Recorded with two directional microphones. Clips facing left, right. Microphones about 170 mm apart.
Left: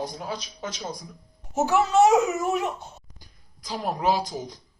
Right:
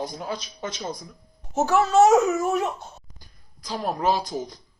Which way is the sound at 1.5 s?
15° left (ahead or behind).